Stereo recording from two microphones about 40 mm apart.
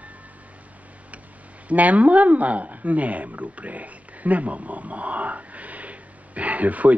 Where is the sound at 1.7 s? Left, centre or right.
Right.